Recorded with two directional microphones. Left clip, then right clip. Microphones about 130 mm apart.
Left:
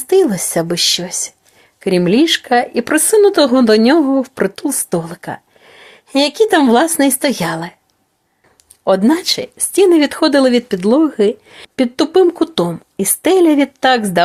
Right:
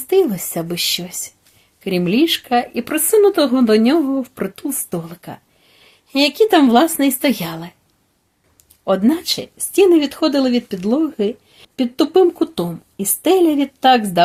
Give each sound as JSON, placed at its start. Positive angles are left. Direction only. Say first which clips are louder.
{"t": 0.1, "sound": "speech", "louder": "left 3 dB", "side_deg": 35}
{"t": 8.8, "sound": "speech", "louder": "left 4 dB", "side_deg": 30}